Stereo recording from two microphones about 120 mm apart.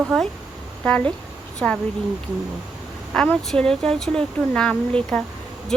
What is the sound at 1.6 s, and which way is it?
Speech, 10° left (ahead or behind).